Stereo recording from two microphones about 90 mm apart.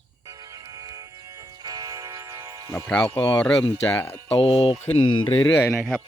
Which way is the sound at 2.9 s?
15° left (ahead or behind).